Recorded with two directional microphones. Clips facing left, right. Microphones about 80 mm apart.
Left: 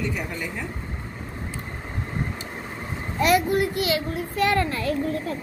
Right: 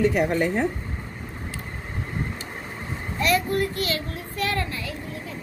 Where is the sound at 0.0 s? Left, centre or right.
Right.